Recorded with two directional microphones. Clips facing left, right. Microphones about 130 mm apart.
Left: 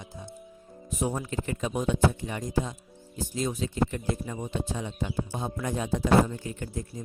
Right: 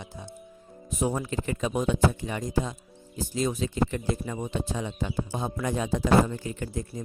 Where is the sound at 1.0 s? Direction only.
90° right.